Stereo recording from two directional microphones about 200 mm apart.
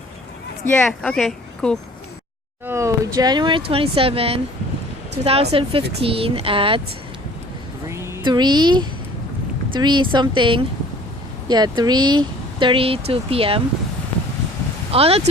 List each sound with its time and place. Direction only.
0.7 s speech: 5° left (ahead or behind)
2.6 s speech: 15° right (ahead or behind)
7.9 s a woman's voice: 15° right (ahead or behind)
14.9 s speech: 30° right (ahead or behind)